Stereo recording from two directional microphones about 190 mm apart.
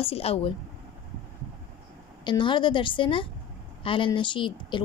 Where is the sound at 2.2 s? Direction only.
25° left (ahead or behind).